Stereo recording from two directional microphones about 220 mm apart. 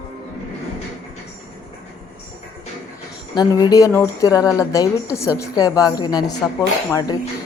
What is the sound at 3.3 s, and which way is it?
A woman's voice, 15° left (ahead or behind).